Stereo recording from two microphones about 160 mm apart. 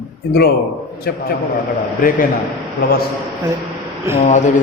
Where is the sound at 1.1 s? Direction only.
75° left (ahead or behind).